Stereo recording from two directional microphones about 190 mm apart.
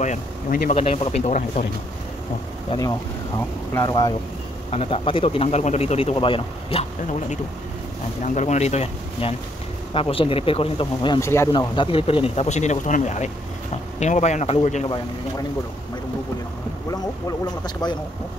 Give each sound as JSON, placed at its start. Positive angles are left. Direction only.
{"t": 0.0, "sound": "speech", "side_deg": 45}
{"t": 0.7, "sound": "speech", "side_deg": 30}
{"t": 3.7, "sound": "speech", "side_deg": 20}
{"t": 4.6, "sound": "speech", "side_deg": 30}
{"t": 17.8, "sound": "speech", "side_deg": 20}